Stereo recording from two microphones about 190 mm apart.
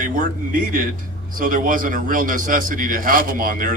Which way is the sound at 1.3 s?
45° right (ahead or behind).